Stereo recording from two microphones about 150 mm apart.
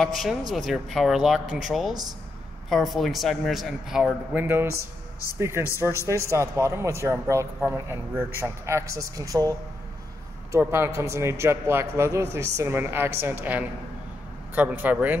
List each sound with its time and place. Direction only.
0.0 s a man's voice: centre (ahead or behind)